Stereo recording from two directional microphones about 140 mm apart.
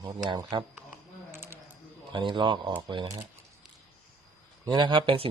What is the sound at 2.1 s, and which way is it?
Speech, 35° right (ahead or behind).